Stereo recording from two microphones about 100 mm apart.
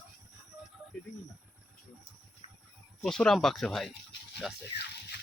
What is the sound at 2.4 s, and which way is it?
Livestock, 75° left (ahead or behind).